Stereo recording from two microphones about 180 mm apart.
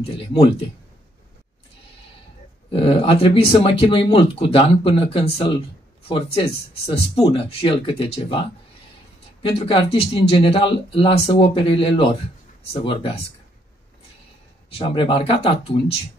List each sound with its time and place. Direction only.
2.7 s speech: 30° left (ahead or behind)
9.4 s speech: 30° left (ahead or behind)
14.7 s speech: 30° left (ahead or behind)